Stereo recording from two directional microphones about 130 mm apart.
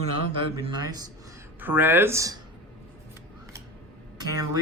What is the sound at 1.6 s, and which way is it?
Speech, 15° right (ahead or behind).